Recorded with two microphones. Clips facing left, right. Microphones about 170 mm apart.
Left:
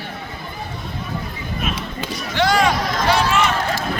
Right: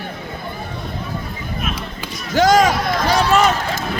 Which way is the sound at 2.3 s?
45° right (ahead or behind).